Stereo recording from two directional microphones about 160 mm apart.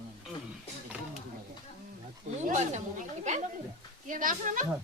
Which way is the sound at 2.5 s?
45° right (ahead or behind).